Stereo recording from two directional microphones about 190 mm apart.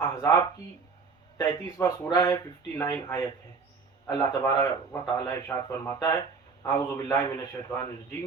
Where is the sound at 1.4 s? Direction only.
15° left (ahead or behind).